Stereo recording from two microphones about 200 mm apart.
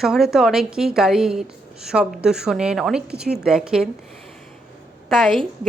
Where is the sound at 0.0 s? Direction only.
Centre (ahead or behind).